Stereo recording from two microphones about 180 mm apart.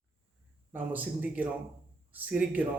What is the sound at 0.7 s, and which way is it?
A man's voice, 10° right (ahead or behind).